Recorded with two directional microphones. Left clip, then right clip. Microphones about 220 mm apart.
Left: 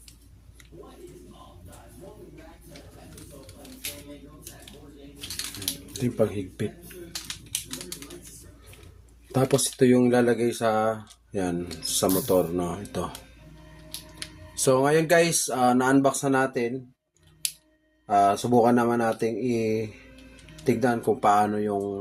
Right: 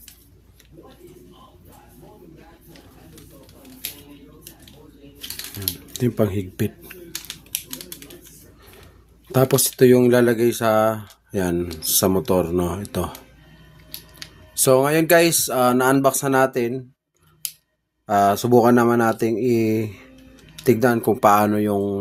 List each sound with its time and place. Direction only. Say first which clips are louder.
5.9 s speech: right 4 dB; 50° right (ahead or behind)
7.1 s typewriter: right 2 dB; 10° right (ahead or behind)
9.3 s speech: right 5 dB; 50° right (ahead or behind)
14.5 s speech: right 4 dB; 45° right (ahead or behind)
18.0 s speech: right 3 dB; 50° right (ahead or behind)